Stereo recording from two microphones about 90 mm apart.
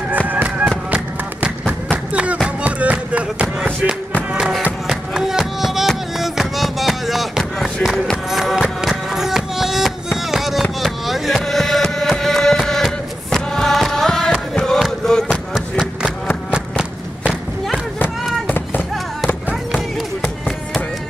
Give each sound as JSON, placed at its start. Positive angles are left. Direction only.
{"t": 0.3, "sound": "fireworks", "side_deg": -20}
{"t": 0.9, "sound": "music", "side_deg": -15}
{"t": 10.3, "sound": "fireworks", "side_deg": 0}
{"t": 14.8, "sound": "a sound", "side_deg": 5}
{"t": 20.2, "sound": "music", "side_deg": 0}